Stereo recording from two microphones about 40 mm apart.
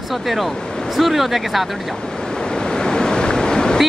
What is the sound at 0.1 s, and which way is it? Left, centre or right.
Speech, centre.